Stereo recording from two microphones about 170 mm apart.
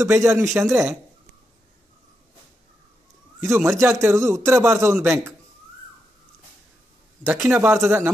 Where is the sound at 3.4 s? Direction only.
15° right (ahead or behind).